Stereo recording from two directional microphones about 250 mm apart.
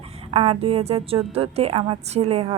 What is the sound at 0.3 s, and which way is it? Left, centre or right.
Speech, right.